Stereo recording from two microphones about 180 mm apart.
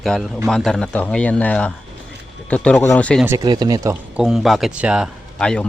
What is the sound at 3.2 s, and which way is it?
Speech, 20° right (ahead or behind).